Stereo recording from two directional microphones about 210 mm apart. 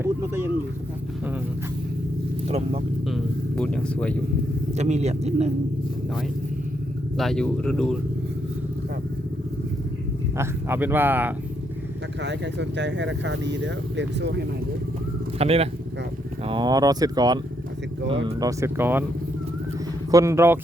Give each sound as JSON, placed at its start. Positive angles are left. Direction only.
{"t": 0.0, "sound": "a sound", "side_deg": -10}
{"t": 3.1, "sound": "vehicle", "side_deg": 5}
{"t": 4.8, "sound": "speech", "side_deg": -30}
{"t": 7.2, "sound": "speech", "side_deg": 0}
{"t": 10.3, "sound": "speech", "side_deg": -10}
{"t": 12.2, "sound": "speech", "side_deg": -55}
{"t": 15.4, "sound": "speech", "side_deg": -30}
{"t": 20.1, "sound": "speech", "side_deg": -15}